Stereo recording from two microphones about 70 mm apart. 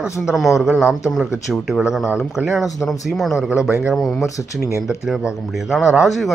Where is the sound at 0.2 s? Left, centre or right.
Centre.